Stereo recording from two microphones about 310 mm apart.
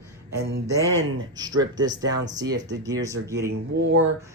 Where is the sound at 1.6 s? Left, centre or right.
Centre.